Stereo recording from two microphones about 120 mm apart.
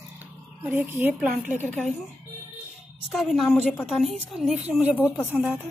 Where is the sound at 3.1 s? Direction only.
Centre (ahead or behind).